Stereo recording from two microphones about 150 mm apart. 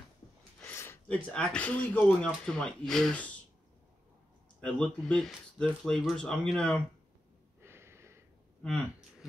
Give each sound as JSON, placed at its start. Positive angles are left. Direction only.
{"t": 0.7, "sound": "speech", "side_deg": 15}
{"t": 4.6, "sound": "speech", "side_deg": 5}
{"t": 7.6, "sound": "a sound", "side_deg": -15}